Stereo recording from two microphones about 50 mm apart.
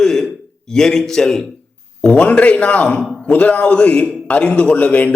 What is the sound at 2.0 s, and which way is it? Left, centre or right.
A man's voice, left.